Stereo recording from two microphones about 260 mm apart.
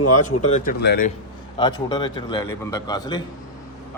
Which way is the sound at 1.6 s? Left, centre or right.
Centre.